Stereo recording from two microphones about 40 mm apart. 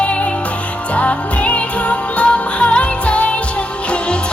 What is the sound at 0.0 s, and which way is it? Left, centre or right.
Music, left.